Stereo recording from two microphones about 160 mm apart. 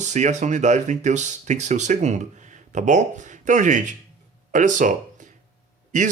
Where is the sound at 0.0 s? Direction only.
45° right (ahead or behind).